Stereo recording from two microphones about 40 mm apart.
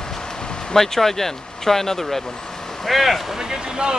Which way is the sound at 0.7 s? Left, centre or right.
Centre.